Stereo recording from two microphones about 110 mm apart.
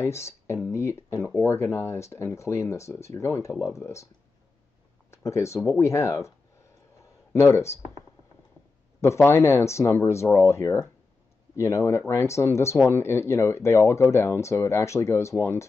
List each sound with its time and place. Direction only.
0.0 s speech: 25° left (ahead or behind)
5.1 s speech: 25° left (ahead or behind)
7.3 s speech: 25° left (ahead or behind)
9.0 s speech: 25° left (ahead or behind)